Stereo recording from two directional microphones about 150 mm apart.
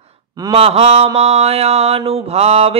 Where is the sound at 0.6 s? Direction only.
40° right (ahead or behind).